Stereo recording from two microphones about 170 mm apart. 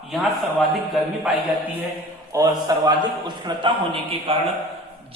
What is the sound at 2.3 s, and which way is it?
A man's voice, 20° right (ahead or behind).